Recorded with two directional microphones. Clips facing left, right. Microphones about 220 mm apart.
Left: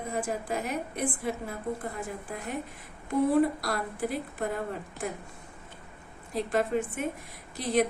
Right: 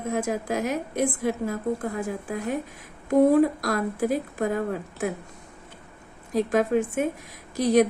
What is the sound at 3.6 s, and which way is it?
Speech, 45° right (ahead or behind).